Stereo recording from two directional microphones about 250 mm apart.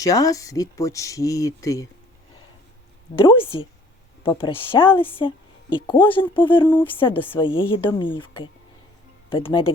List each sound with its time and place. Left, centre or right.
0.0 s speech: centre
3.2 s a woman's voice: left